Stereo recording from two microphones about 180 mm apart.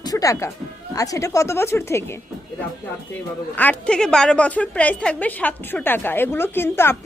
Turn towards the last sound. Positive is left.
turn(degrees=15)  # may be behind; listen again after turning